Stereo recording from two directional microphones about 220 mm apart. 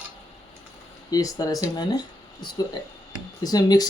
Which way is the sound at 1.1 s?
15° left (ahead or behind).